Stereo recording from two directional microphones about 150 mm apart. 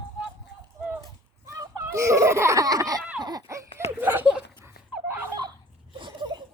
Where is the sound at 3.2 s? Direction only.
25° right (ahead or behind).